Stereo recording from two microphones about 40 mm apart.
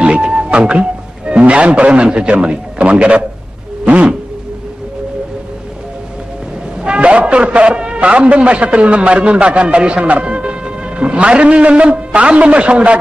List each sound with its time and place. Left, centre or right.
0.2 s music: right
1.4 s a man's voice: right
6.8 s a sound: right
8.0 s a man's voice: right